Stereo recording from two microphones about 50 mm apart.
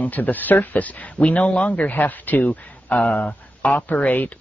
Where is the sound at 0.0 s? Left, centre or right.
Left.